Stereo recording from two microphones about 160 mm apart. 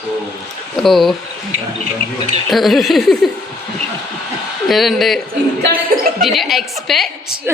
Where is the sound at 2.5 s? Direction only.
Centre (ahead or behind).